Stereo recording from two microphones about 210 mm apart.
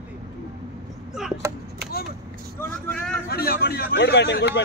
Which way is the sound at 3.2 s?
45° left (ahead or behind).